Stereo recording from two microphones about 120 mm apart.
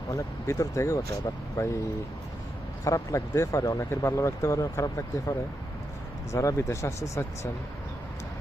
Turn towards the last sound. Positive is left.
turn(degrees=25)  # may be behind; listen again after turning